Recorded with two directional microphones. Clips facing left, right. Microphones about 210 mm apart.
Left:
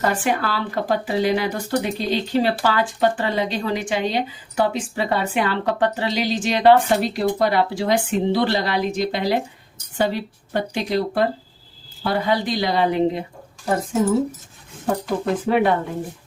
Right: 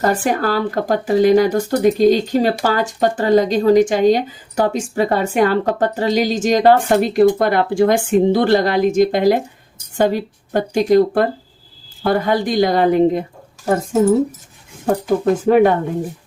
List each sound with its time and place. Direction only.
0.0 s speech: 40° right (ahead or behind)
15.4 s speech: 45° right (ahead or behind)